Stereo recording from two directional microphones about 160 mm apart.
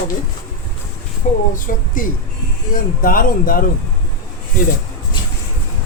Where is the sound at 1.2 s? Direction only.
55° left (ahead or behind).